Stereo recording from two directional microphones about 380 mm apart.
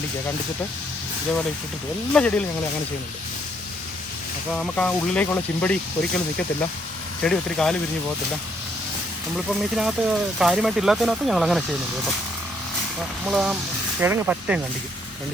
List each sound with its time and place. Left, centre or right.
2.1 s speech: centre
4.5 s speech: centre
7.2 s speech: centre
9.3 s speech: centre
13.2 s speech: centre